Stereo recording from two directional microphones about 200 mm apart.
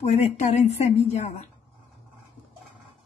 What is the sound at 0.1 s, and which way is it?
A woman's voice, 35° left (ahead or behind).